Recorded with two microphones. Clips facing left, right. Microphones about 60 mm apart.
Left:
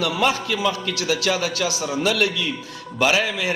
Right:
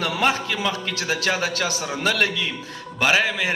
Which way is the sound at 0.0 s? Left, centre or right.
Right.